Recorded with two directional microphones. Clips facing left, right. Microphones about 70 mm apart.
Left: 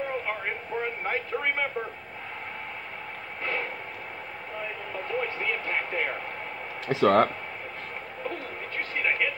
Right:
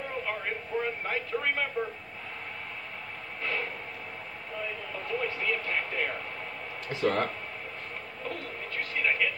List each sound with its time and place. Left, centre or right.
0.7 s a sound: left
1.0 s speech: left
1.8 s speech: left
5.0 s speech: left
6.9 s speech: left
8.7 s a sound: left